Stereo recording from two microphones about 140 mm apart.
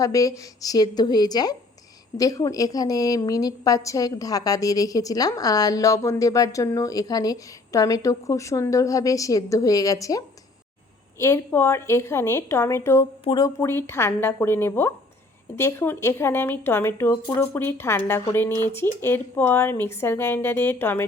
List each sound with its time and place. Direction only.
0.0 s a woman's voice: 25° left (ahead or behind)